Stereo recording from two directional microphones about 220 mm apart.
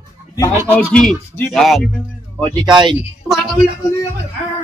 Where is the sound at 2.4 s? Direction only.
20° right (ahead or behind).